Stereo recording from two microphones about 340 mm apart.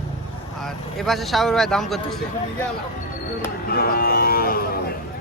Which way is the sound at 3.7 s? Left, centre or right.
Left.